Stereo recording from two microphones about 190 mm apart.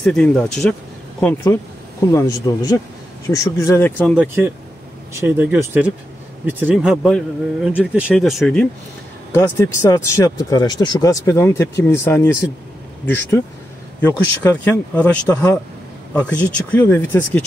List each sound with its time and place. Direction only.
0.0 s speech: 5° left (ahead or behind)
5.1 s speech: 10° right (ahead or behind)
9.3 s speech: 15° left (ahead or behind)